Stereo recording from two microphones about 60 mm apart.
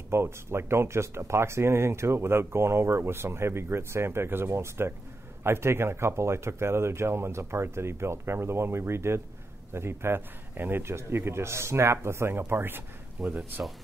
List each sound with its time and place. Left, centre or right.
0.1 s speech: right
13.2 s speech: centre